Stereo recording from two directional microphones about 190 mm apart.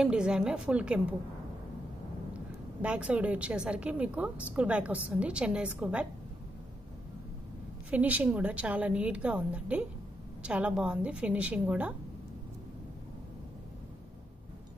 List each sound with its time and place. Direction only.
0.0 s a woman's voice: 5° right (ahead or behind)
2.8 s a woman's voice: 5° right (ahead or behind)
7.9 s a woman's voice: 10° right (ahead or behind)